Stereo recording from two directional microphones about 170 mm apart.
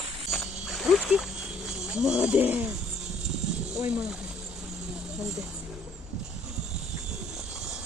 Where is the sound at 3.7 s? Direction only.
5° right (ahead or behind).